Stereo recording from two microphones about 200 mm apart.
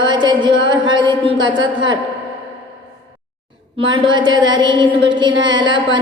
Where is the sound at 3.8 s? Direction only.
25° right (ahead or behind).